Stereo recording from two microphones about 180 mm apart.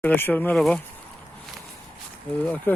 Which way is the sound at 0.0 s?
10° left (ahead or behind).